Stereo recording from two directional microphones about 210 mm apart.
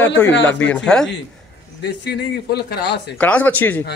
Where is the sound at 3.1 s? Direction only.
5° left (ahead or behind).